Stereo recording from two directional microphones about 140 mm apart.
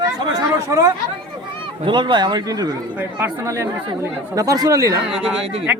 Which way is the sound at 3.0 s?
15° right (ahead or behind).